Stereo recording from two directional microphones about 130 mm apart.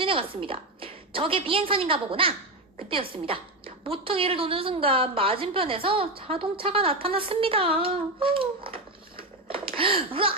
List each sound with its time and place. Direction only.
0.0 s a woman's voice: 45° right (ahead or behind)